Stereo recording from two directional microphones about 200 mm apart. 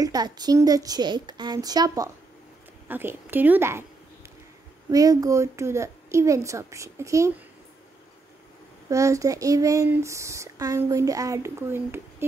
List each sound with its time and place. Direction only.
0.0 s a woman's voice: 20° right (ahead or behind)
4.9 s speech: 15° right (ahead or behind)
8.8 s speech: 15° right (ahead or behind)